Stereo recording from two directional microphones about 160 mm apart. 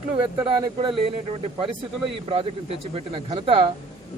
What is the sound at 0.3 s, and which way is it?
Speech, 30° right (ahead or behind).